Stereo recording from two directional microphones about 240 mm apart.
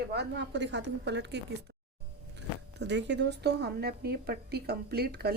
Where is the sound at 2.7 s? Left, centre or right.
Right.